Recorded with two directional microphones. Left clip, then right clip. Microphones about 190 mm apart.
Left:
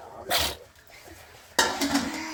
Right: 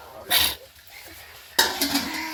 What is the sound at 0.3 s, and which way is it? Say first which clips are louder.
Sneeze: right 4 dB; 45° left (ahead or behind).